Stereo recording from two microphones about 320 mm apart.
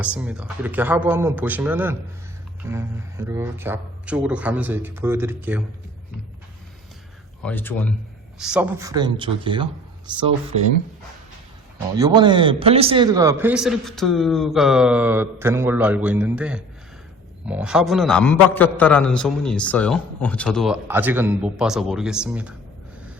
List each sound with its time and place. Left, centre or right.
0.0 s a man's voice: centre
7.4 s a man's voice: centre
11.9 s a man's voice: centre